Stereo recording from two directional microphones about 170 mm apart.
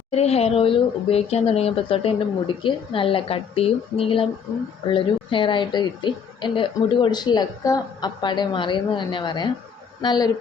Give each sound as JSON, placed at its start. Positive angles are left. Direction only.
{"t": 0.1, "sound": "a woman's voice", "side_deg": 40}